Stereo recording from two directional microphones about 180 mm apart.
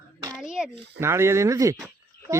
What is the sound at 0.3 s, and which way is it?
Speech, 5° right (ahead or behind).